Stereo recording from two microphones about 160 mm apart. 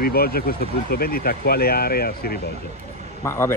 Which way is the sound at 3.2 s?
15° left (ahead or behind).